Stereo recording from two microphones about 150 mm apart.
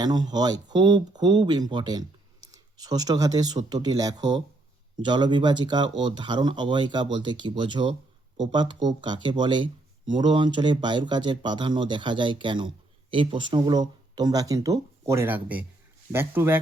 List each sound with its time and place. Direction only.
0.0 s speech: 25° right (ahead or behind)